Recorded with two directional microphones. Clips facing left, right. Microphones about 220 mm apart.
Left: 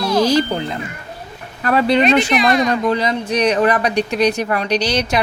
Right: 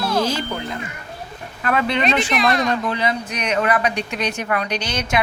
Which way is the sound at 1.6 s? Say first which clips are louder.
Left 6 dB; 35° left (ahead or behind).